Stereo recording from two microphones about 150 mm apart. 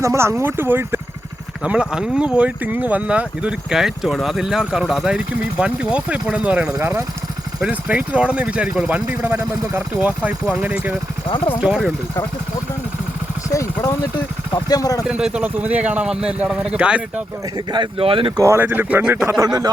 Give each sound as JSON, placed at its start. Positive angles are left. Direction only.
{"t": 0.0, "sound": "speech", "side_deg": -20}
{"t": 13.5, "sound": "speech", "side_deg": 20}
{"t": 15.0, "sound": "speech", "side_deg": -5}
{"t": 17.7, "sound": "speech", "side_deg": -35}
{"t": 18.4, "sound": "speech", "side_deg": -15}